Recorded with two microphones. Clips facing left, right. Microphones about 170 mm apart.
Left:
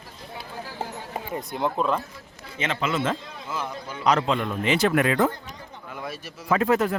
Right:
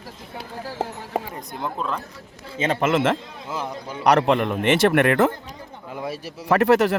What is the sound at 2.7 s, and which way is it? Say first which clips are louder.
Speech: right 6 dB; 50° right (ahead or behind).